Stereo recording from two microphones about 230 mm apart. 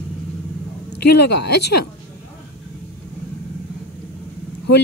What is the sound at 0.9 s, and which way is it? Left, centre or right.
Speech, left.